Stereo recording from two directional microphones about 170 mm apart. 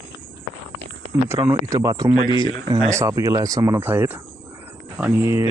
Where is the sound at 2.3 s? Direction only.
30° left (ahead or behind).